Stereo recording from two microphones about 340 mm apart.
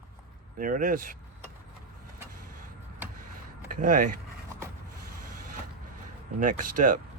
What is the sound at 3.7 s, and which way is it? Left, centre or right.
Speech, right.